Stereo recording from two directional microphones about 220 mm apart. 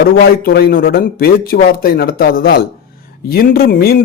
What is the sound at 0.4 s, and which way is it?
A man's voice, 45° left (ahead or behind).